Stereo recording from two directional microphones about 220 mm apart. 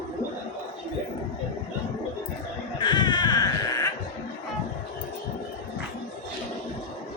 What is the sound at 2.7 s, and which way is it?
Baby cry, 20° left (ahead or behind).